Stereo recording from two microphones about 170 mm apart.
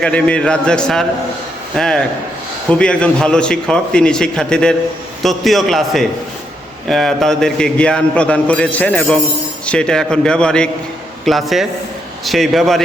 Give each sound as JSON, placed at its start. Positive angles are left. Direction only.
{"t": 0.0, "sound": "a man's voice", "side_deg": 5}